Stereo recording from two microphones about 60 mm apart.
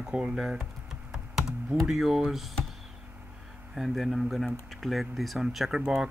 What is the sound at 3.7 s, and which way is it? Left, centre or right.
Speech, centre.